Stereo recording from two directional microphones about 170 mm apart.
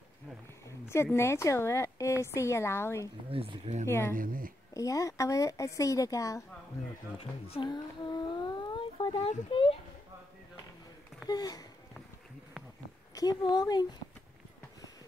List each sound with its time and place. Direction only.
0.7 s speech: 15° left (ahead or behind)
3.3 s speech: 35° right (ahead or behind)
4.1 s speech: 55° right (ahead or behind)
4.7 s a woman's voice: 20° left (ahead or behind)
7.2 s speech: 35° left (ahead or behind)
9.2 s speech: 35° left (ahead or behind)
11.2 s a woman's voice: 20° left (ahead or behind)
13.1 s a woman's voice: 20° left (ahead or behind)